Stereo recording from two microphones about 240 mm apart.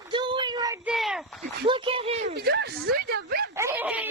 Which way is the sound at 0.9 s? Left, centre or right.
Centre.